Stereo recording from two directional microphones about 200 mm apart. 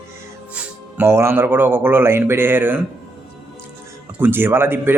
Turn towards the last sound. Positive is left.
turn(degrees=-10)  # may be behind; listen again after turning